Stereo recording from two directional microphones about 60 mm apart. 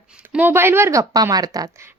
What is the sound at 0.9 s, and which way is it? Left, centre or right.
Speech, right.